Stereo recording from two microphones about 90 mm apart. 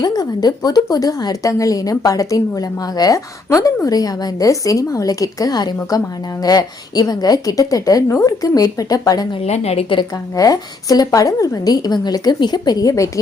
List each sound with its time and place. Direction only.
0.0 s a woman's voice: 45° left (ahead or behind)
9.3 s a woman's voice: 70° left (ahead or behind)
10.3 s a woman's voice: 40° left (ahead or behind)